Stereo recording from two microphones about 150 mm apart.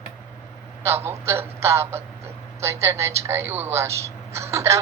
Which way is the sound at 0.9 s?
15° right (ahead or behind).